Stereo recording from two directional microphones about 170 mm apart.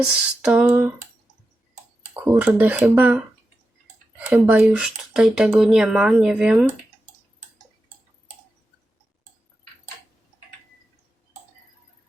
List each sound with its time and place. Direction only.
0.4 s speech: 5° right (ahead or behind)
2.2 s speech: 10° right (ahead or behind)
4.3 s speech: 10° right (ahead or behind)